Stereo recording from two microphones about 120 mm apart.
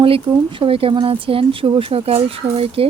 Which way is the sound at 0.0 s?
50° right (ahead or behind).